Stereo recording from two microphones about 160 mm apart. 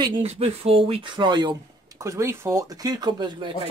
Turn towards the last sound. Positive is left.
turn(degrees=-30)  # may be behind; listen again after turning